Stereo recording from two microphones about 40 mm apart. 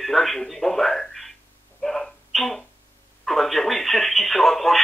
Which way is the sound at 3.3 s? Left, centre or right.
Centre.